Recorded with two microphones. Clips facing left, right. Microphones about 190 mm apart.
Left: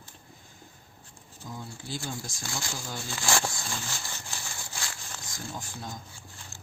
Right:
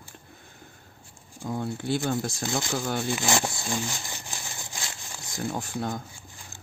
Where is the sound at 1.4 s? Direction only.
60° right (ahead or behind).